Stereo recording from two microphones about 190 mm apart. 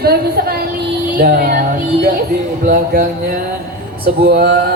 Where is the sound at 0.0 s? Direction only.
55° right (ahead or behind).